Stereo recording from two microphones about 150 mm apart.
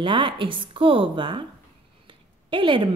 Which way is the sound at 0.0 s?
35° right (ahead or behind).